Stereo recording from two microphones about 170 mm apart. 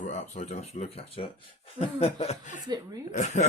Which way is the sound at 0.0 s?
45° left (ahead or behind).